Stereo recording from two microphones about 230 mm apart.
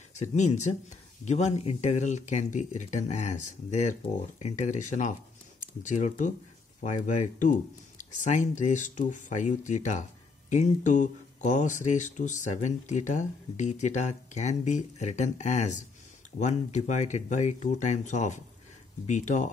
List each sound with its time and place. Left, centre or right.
0.2 s speech: left